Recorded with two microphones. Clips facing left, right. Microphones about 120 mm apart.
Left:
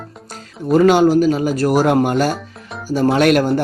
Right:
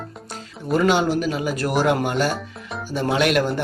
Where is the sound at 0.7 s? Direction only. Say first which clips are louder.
Left 7 dB; 45° left (ahead or behind).